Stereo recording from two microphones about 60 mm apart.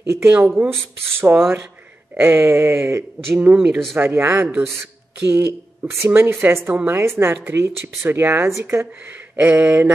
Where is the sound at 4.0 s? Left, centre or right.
Right.